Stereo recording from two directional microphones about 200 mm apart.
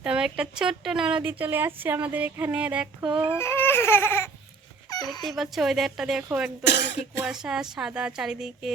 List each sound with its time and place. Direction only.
0.0 s speech: 5° right (ahead or behind)
3.1 s a sound: 25° right (ahead or behind)
3.3 s baby cry: 10° left (ahead or behind)
4.9 s dog: 20° left (ahead or behind)
5.2 s speech: centre (ahead or behind)
6.7 s speech: 60° left (ahead or behind)
7.3 s speech: 5° right (ahead or behind)